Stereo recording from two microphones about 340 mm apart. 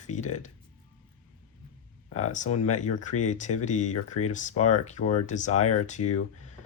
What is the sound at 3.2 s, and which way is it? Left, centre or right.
Speech, left.